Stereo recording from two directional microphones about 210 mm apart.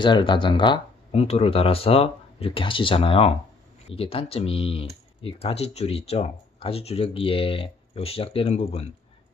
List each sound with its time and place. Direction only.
0.0 s speech: 20° left (ahead or behind)